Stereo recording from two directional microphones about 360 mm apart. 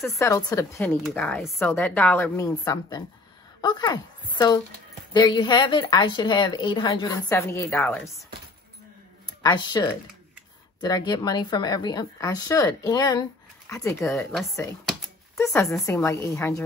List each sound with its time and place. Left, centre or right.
0.0 s speech: centre
5.1 s speech: centre
9.4 s speech: centre